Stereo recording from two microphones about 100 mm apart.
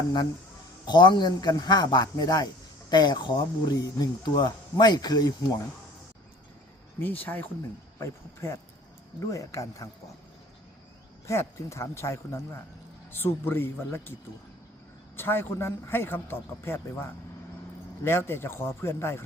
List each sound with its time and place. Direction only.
0.9 s speech: 50° left (ahead or behind)
7.0 s speech: 15° left (ahead or behind)
7.9 s a man's voice: 30° left (ahead or behind)
11.3 s a man's voice: 30° left (ahead or behind)
15.1 s a man's voice: 20° left (ahead or behind)